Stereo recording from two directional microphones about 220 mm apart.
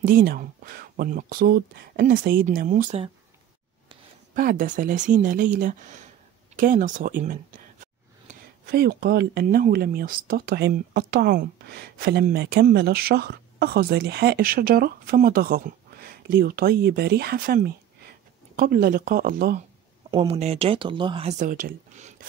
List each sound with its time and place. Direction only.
0.0 s speech: 40° right (ahead or behind)
4.4 s speech: 35° right (ahead or behind)
20.1 s speech: 25° right (ahead or behind)